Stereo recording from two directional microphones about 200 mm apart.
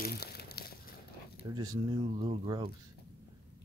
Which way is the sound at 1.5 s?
20° right (ahead or behind).